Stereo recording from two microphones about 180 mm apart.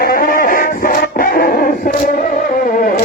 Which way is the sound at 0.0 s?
50° left (ahead or behind).